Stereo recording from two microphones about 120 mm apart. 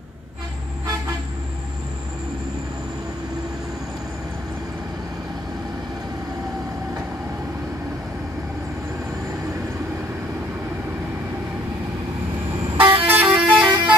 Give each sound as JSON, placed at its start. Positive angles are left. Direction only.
{"t": 12.7, "sound": "vehicle", "side_deg": -45}
{"t": 13.2, "sound": "vehicle", "side_deg": -10}